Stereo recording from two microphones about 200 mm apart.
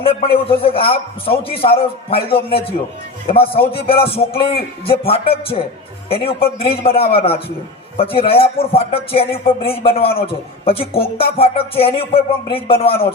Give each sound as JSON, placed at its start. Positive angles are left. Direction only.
{"t": 0.0, "sound": "a man's voice", "side_deg": 30}